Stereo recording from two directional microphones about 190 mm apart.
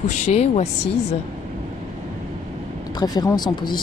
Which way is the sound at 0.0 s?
35° left (ahead or behind).